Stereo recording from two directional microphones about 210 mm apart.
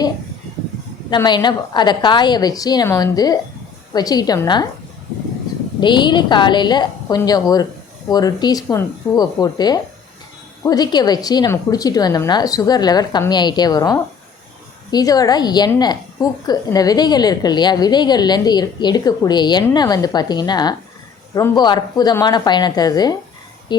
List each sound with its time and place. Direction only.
1.1 s a woman's voice: 20° left (ahead or behind)
5.8 s a woman's voice: 20° left (ahead or behind)